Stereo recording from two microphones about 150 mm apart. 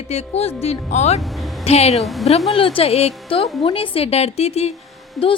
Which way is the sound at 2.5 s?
35° left (ahead or behind).